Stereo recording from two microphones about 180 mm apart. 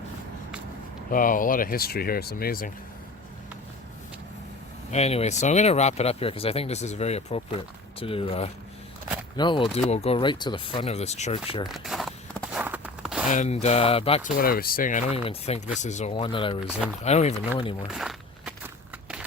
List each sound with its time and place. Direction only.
1.1 s speech: 50° left (ahead or behind)
4.9 s speech: 35° left (ahead or behind)
11.7 s walk: centre (ahead or behind)
13.2 s speech: 45° left (ahead or behind)
14.3 s speech: 50° left (ahead or behind)
16.1 s speech: 30° left (ahead or behind)
17.9 s walk: centre (ahead or behind)